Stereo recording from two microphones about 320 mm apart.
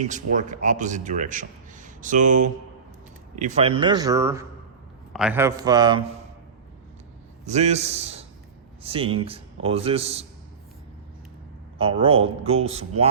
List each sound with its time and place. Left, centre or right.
0.1 s a man's voice: right
7.4 s a man's voice: right
11.8 s a man's voice: centre